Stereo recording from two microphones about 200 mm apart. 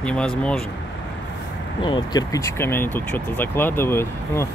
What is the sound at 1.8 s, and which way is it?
Speech, 20° left (ahead or behind).